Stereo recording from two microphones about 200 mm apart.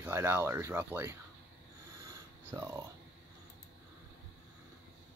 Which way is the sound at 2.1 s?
15° right (ahead or behind).